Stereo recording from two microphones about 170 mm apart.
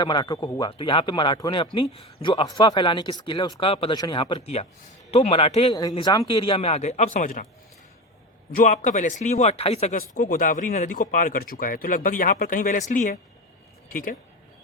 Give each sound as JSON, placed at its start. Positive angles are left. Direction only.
{"t": 0.0, "sound": "speech", "side_deg": 25}
{"t": 5.7, "sound": "speech", "side_deg": 25}
{"t": 8.5, "sound": "speech", "side_deg": 45}